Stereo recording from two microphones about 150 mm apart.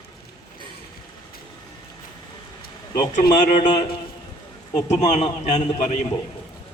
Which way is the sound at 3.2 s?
55° left (ahead or behind).